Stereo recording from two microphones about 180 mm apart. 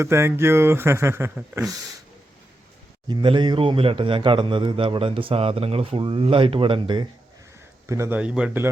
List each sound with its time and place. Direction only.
0.0 s speech: 15° right (ahead or behind)
3.1 s a man's voice: 25° right (ahead or behind)
7.9 s speech: 15° right (ahead or behind)